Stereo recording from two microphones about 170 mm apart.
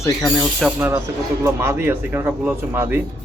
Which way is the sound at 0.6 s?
5° right (ahead or behind).